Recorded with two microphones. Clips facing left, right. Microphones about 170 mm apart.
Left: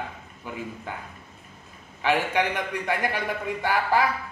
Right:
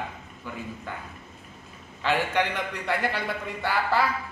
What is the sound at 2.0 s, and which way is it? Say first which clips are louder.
Speech: left 1 dB; 15° left (ahead or behind).